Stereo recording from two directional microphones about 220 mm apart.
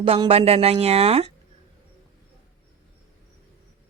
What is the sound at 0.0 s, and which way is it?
Speech, 25° right (ahead or behind).